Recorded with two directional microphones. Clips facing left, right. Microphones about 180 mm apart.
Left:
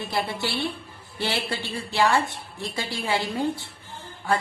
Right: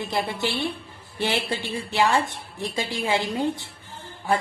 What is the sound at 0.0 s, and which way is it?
A woman's voice, 20° right (ahead or behind).